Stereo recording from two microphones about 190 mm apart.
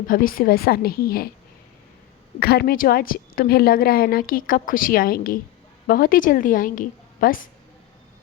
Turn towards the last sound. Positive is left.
turn(degrees=45)  # may be behind; listen again after turning